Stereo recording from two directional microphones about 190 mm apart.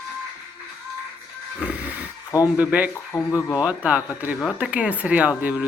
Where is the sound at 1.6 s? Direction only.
5° right (ahead or behind).